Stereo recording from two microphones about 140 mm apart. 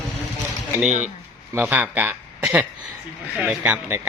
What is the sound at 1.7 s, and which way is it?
Speech, 10° right (ahead or behind).